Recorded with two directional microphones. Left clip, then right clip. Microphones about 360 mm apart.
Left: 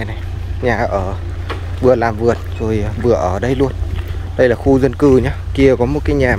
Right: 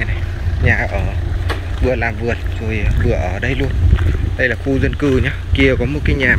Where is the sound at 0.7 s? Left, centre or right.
Centre.